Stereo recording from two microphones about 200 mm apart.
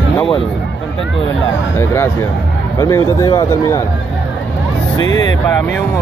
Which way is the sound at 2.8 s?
15° left (ahead or behind).